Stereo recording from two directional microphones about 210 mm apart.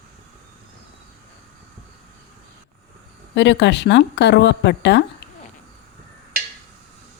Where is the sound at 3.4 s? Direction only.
55° left (ahead or behind).